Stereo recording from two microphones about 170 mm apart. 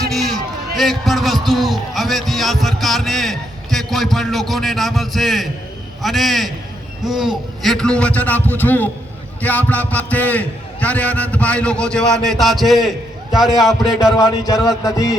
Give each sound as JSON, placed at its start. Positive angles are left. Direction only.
{"t": 0.1, "sound": "a sound", "side_deg": 0}
{"t": 0.8, "sound": "a man's voice", "side_deg": 0}
{"t": 14.4, "sound": "mantra", "side_deg": 20}